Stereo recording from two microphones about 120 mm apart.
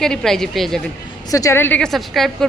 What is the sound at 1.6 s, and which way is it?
Speech, 10° left (ahead or behind).